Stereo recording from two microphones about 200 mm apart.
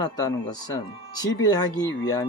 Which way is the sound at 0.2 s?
20° left (ahead or behind).